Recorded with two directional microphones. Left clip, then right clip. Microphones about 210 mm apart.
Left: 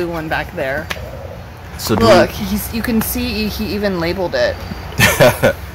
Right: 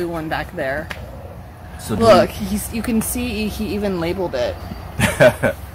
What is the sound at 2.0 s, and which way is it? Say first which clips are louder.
Speech: left 1 dB; 15° right (ahead or behind).